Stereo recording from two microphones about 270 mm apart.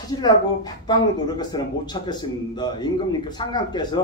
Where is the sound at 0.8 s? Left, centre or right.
Centre.